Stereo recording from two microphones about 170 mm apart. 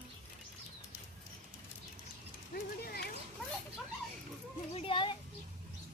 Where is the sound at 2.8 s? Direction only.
70° left (ahead or behind).